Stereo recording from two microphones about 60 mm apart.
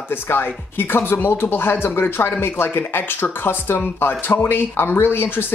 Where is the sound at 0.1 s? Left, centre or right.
Left.